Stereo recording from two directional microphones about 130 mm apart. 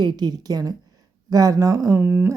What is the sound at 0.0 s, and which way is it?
A woman's voice, 35° right (ahead or behind).